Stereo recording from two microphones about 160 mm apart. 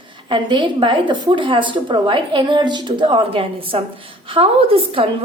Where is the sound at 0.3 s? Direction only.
30° right (ahead or behind).